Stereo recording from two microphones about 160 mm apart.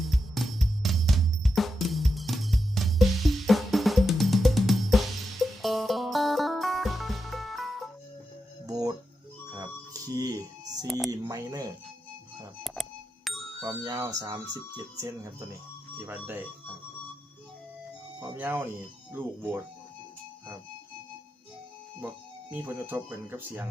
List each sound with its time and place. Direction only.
0.0 s drum: centre (ahead or behind)
8.6 s music: 25° right (ahead or behind)
12.6 s music: centre (ahead or behind)
13.8 s speech: 25° right (ahead or behind)
18.2 s speech: 15° right (ahead or behind)
22.0 s speech: 10° right (ahead or behind)